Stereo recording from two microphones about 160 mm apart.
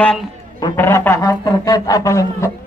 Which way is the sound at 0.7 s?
15° left (ahead or behind).